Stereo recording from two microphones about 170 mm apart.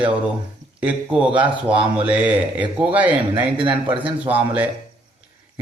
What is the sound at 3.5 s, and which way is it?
Speech, 30° right (ahead or behind).